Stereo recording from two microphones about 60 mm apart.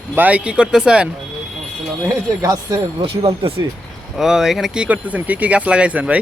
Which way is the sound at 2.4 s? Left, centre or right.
Right.